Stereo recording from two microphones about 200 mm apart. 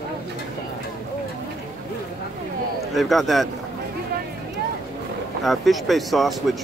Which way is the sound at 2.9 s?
Centre (ahead or behind).